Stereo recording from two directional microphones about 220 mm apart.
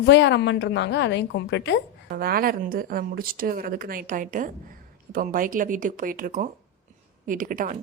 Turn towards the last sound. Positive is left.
turn(degrees=-40)  # may be behind; listen again after turning